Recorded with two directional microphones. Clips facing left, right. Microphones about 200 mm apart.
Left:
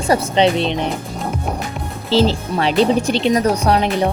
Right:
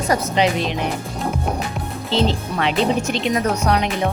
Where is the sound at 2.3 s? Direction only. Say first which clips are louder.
Left 3 dB; 35° left (ahead or behind).